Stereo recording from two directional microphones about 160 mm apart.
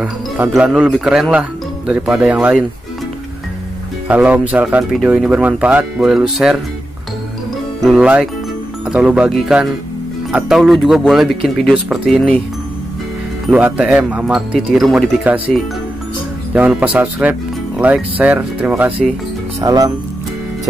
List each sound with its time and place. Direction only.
0.5 s speech: 5° right (ahead or behind)
4.1 s speech: 10° right (ahead or behind)
7.8 s speech: 5° right (ahead or behind)
13.5 s speech: 10° right (ahead or behind)
16.5 s speech: 10° right (ahead or behind)
19.6 s speech: 20° right (ahead or behind)